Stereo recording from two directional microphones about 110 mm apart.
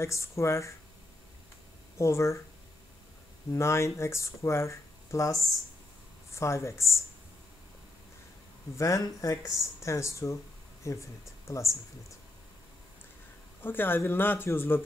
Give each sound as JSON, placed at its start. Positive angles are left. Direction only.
{"t": 0.0, "sound": "speech", "side_deg": 25}
{"t": 2.0, "sound": "speech", "side_deg": 25}
{"t": 3.5, "sound": "speech", "side_deg": 25}
{"t": 8.7, "sound": "speech", "side_deg": 30}
{"t": 13.6, "sound": "speech", "side_deg": 20}